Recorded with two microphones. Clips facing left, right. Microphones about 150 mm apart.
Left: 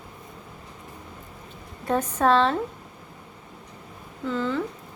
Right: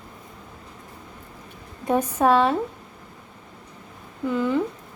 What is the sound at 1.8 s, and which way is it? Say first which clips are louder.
Speech: right 2 dB; 10° right (ahead or behind).